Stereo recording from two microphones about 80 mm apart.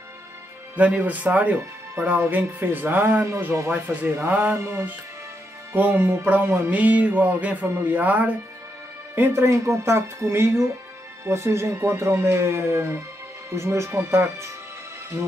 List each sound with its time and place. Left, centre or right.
0.7 s speech: centre
4.6 s speech: right
5.8 s speech: right